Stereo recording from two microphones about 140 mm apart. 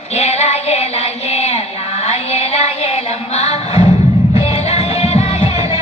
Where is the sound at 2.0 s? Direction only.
50° left (ahead or behind).